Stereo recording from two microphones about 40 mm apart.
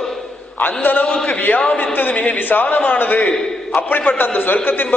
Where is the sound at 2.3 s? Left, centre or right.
Left.